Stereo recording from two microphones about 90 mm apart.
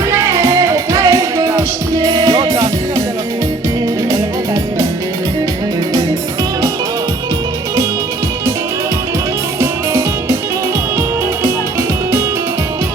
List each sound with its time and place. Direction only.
0.1 s music: 35° right (ahead or behind)
9.6 s music: 30° right (ahead or behind)